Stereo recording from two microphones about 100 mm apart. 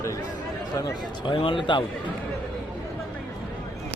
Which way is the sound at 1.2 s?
55° left (ahead or behind).